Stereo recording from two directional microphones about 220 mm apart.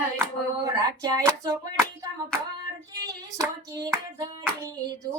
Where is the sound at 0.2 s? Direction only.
15° right (ahead or behind).